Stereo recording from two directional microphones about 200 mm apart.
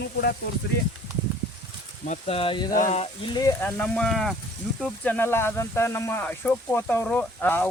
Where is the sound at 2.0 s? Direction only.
35° left (ahead or behind).